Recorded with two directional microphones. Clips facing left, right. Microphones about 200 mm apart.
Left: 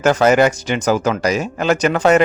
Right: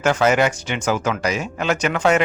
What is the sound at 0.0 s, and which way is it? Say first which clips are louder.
Speech: left 4 dB; 40° left (ahead or behind).